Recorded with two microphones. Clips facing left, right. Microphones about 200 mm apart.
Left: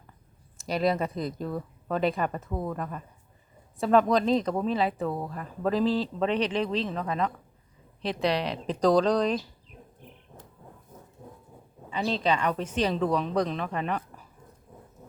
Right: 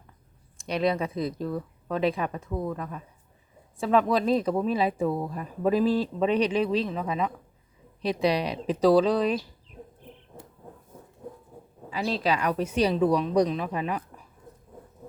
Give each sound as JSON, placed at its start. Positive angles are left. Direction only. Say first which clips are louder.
{"t": 0.6, "sound": "speech", "louder": "even", "side_deg": 0}
{"t": 11.9, "sound": "speech", "louder": "even", "side_deg": -5}